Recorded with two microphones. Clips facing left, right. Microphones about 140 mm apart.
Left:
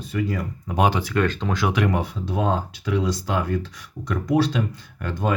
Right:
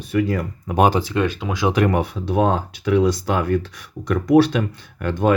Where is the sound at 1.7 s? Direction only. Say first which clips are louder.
Right 7 dB; 50° right (ahead or behind).